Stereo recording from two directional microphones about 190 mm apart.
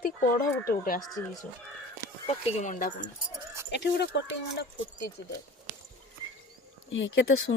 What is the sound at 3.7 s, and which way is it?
Speech, 65° left (ahead or behind).